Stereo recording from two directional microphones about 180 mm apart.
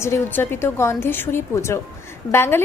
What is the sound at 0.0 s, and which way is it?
A woman's voice, 15° left (ahead or behind).